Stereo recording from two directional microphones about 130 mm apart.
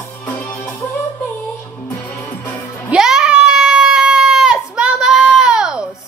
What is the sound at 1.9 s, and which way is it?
Music, 20° left (ahead or behind).